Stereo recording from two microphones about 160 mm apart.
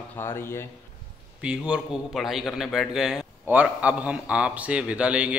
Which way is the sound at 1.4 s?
5° right (ahead or behind).